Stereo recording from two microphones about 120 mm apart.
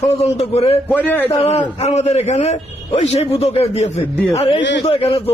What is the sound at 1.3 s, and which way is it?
A man's voice, 55° left (ahead or behind).